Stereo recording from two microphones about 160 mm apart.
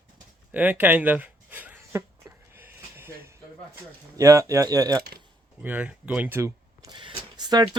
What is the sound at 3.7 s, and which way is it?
Speech, 20° right (ahead or behind).